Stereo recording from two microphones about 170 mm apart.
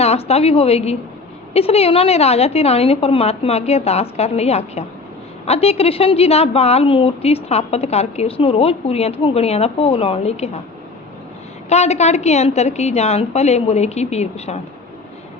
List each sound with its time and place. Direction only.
0.0 s a woman's voice: 35° left (ahead or behind)
11.7 s a woman's voice: 40° left (ahead or behind)